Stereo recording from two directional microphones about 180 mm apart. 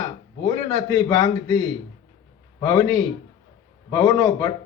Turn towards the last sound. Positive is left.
turn(degrees=25)  # may be behind; listen again after turning